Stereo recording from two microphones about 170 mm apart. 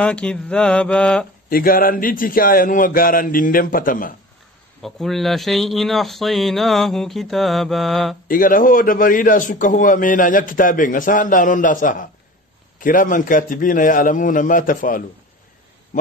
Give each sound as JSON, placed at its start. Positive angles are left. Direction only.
{"t": 0.0, "sound": "mantra", "side_deg": 5}
{"t": 1.5, "sound": "a man's voice", "side_deg": 55}
{"t": 4.8, "sound": "speech", "side_deg": 0}
{"t": 8.3, "sound": "a man's voice", "side_deg": 55}